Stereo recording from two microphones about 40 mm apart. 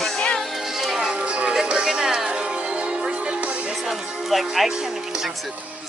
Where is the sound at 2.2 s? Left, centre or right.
Right.